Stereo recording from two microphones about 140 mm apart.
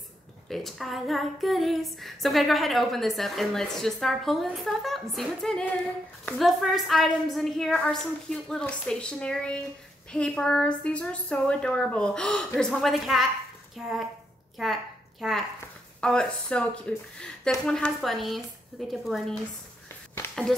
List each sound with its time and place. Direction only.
0.5 s female singing: centre (ahead or behind)
10.1 s a woman's voice: 5° left (ahead or behind)
12.5 s female singing: 5° left (ahead or behind)
14.6 s a woman's voice: centre (ahead or behind)
16.0 s female singing: 5° left (ahead or behind)